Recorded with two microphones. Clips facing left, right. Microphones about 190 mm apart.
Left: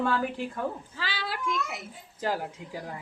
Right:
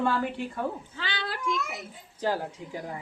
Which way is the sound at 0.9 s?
5° left (ahead or behind).